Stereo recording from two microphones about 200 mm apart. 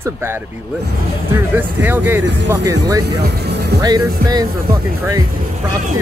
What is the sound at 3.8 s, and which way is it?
Speech, 20° right (ahead or behind).